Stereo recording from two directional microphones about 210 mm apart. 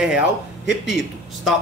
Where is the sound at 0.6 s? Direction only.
55° left (ahead or behind).